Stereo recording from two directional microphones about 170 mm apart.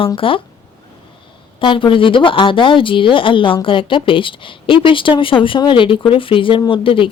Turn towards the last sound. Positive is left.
turn(degrees=30)  # may be behind; listen again after turning